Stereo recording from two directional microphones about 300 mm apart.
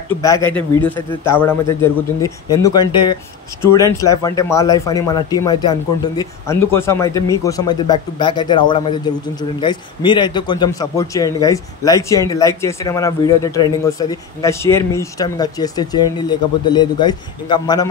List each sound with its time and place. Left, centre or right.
0.2 s speech: centre